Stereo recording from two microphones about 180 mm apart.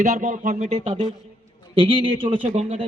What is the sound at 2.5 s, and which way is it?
Speech, 40° right (ahead or behind).